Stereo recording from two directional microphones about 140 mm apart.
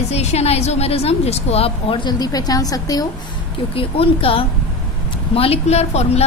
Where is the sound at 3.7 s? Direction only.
40° left (ahead or behind).